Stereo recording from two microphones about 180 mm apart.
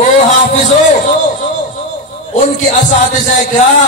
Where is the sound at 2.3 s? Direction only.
45° left (ahead or behind).